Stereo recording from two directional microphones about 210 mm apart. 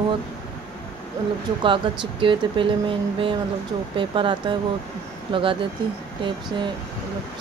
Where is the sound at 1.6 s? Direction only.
25° right (ahead or behind).